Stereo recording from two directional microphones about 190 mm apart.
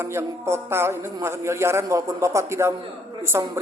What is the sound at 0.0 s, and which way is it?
A man's voice, 15° right (ahead or behind).